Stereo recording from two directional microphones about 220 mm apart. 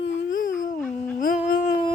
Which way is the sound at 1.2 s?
40° left (ahead or behind).